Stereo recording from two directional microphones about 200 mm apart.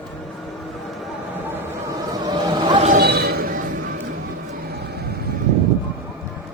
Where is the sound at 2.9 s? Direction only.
50° right (ahead or behind).